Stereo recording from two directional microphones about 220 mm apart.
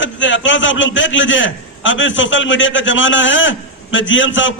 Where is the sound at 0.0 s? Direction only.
55° left (ahead or behind).